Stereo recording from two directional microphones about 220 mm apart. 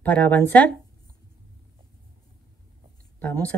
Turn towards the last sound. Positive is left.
turn(degrees=5)  # may be behind; listen again after turning